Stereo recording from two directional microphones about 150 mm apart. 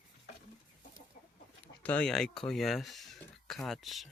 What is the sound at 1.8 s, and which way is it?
Speech, 10° left (ahead or behind).